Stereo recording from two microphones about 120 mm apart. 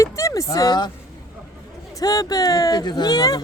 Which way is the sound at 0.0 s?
25° left (ahead or behind).